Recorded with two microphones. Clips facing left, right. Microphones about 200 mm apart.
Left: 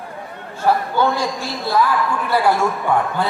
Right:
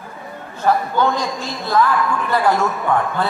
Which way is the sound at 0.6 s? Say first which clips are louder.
Even; 10° left (ahead or behind).